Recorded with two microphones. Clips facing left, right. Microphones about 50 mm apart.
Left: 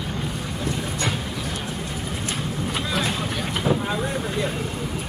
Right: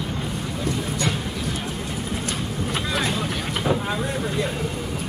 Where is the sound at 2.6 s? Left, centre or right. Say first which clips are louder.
Right 1 dB; centre.